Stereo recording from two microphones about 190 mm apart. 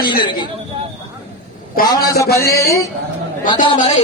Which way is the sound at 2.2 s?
15° left (ahead or behind).